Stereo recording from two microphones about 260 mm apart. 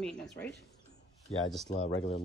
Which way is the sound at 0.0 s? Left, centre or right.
Centre.